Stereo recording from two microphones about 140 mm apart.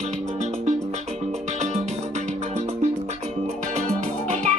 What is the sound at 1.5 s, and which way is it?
Music, 55° right (ahead or behind).